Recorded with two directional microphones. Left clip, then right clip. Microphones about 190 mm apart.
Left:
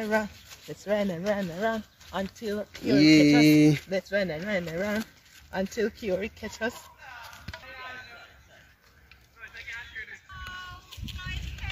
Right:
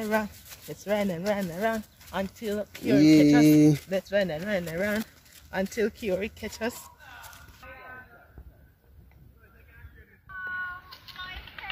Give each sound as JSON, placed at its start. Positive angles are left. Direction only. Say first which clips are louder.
{"t": 0.1, "sound": "speech", "louder": "even", "side_deg": 10}
{"t": 0.8, "sound": "speech", "louder": "even", "side_deg": -5}
{"t": 2.4, "sound": "speech", "louder": "right 1 dB", "side_deg": 15}
{"t": 3.0, "sound": "speech", "louder": "even", "side_deg": -5}
{"t": 3.9, "sound": "speech", "louder": "right 1 dB", "side_deg": 20}
{"t": 10.9, "sound": "a sound", "louder": "even", "side_deg": -20}